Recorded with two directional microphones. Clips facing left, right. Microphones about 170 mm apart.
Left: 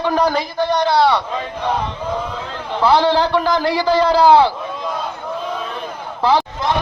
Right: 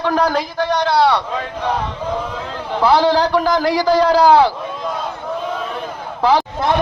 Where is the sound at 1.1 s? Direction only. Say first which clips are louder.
Even; 5° left (ahead or behind).